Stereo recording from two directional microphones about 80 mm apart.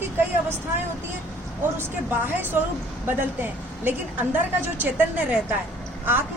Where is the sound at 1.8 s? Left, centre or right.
Right.